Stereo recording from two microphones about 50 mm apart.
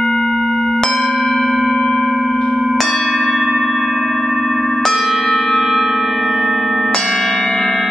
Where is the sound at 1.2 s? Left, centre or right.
Centre.